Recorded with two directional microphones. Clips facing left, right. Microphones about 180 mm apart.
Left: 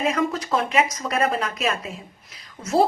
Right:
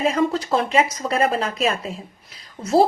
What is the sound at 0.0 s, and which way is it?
A woman's voice, 30° right (ahead or behind).